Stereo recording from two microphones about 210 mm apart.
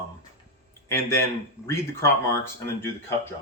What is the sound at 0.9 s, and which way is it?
Speech, 10° left (ahead or behind).